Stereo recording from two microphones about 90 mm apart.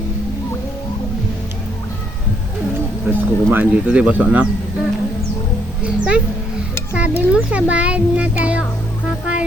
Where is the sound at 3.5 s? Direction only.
15° right (ahead or behind).